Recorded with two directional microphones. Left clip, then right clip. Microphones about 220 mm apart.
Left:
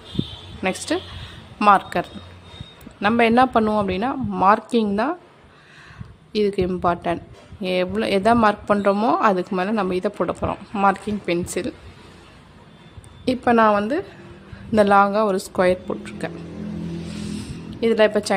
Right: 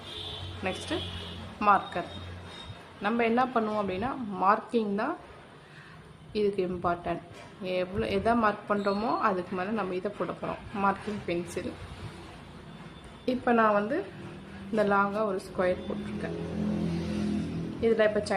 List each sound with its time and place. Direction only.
0.6 s a woman's voice: 50° left (ahead or behind)
6.3 s a woman's voice: 45° left (ahead or behind)
13.2 s a woman's voice: 50° left (ahead or behind)
16.3 s vehicle: centre (ahead or behind)
17.7 s a woman's voice: 50° left (ahead or behind)